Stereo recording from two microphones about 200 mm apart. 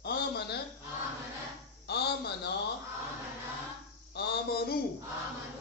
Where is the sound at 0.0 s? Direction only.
55° left (ahead or behind).